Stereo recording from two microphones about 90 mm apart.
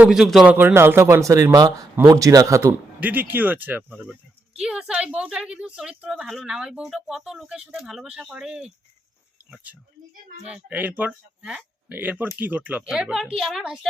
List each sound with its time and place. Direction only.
0.1 s a woman's voice: 5° right (ahead or behind)
0.4 s speech: 25° right (ahead or behind)
3.0 s speech: 20° right (ahead or behind)
4.6 s a woman's voice: 10° right (ahead or behind)
10.5 s a woman's voice: 20° right (ahead or behind)
12.9 s a woman's voice: 5° right (ahead or behind)